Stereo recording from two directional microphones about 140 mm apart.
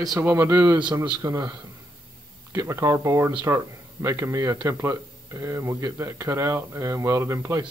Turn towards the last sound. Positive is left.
turn(degrees=-20)  # may be behind; listen again after turning